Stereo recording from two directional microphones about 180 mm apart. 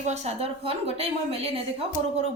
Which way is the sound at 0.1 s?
35° right (ahead or behind).